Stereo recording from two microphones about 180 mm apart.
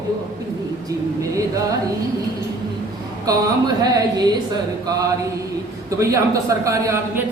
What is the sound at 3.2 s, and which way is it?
Speech, 20° right (ahead or behind).